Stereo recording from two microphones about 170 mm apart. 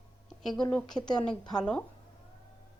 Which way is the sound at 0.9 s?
25° left (ahead or behind).